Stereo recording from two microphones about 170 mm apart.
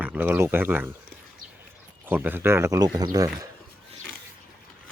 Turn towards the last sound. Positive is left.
turn(degrees=-20)  # may be behind; listen again after turning